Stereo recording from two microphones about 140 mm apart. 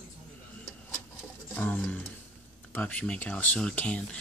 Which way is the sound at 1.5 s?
10° left (ahead or behind).